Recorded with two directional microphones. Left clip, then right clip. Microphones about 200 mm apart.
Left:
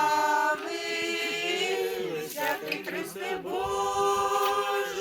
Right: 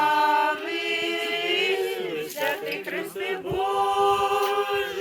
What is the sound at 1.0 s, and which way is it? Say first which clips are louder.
A capella: right 3 dB; 45° right (ahead or behind).